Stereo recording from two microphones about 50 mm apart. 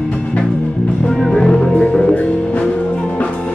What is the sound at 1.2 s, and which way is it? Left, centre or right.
Music, centre.